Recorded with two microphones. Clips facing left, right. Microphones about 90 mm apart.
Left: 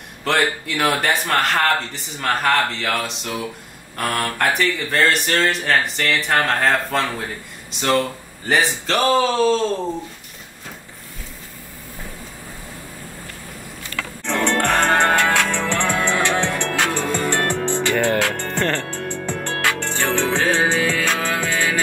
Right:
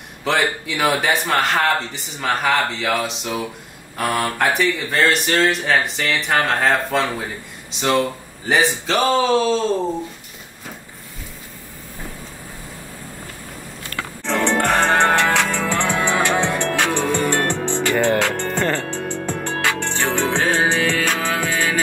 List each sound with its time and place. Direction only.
0.2 s speech: centre (ahead or behind)
14.2 s music: centre (ahead or behind)